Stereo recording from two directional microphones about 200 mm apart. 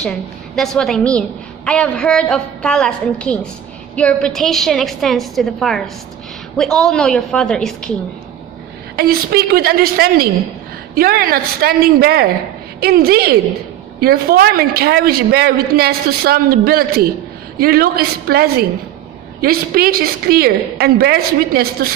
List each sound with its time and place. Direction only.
0.0 s a woman's voice: 5° left (ahead or behind)
9.0 s a woman's voice: 50° right (ahead or behind)